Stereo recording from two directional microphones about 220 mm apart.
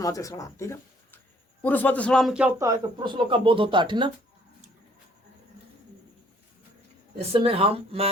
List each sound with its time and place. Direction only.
0.0 s a man's voice: 15° left (ahead or behind); by 4.1 s 20° right (ahead or behind)
7.2 s speech: 25° right (ahead or behind)